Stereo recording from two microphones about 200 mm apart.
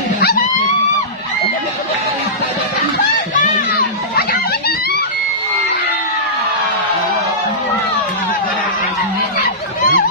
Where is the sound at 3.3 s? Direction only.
45° left (ahead or behind).